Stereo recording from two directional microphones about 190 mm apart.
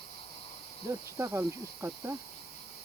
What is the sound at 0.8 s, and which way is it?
Cricket, 15° right (ahead or behind).